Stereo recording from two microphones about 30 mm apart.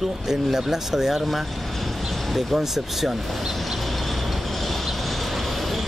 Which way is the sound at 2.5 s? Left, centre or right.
Centre.